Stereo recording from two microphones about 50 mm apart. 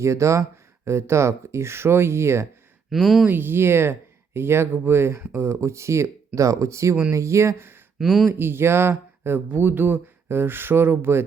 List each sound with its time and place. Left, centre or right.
0.0 s speech: right
2.9 s speech: centre
3.2 s speech: right
5.3 s speech: right
7.1 s speech: right
7.9 s speech: centre
8.3 s speech: right